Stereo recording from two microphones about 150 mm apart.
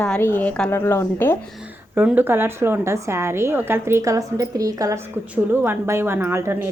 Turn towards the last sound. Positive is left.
turn(degrees=-15)  # may be behind; listen again after turning